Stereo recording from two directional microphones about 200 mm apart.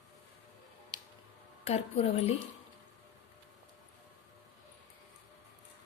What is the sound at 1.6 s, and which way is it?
Speech, 30° left (ahead or behind).